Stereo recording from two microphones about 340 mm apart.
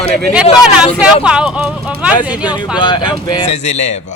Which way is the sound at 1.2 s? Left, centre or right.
Centre.